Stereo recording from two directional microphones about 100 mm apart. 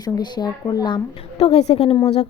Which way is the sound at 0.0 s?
45° left (ahead or behind).